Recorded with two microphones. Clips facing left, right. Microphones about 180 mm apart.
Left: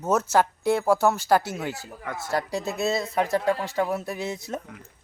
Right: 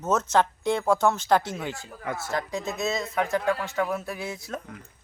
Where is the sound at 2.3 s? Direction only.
35° left (ahead or behind).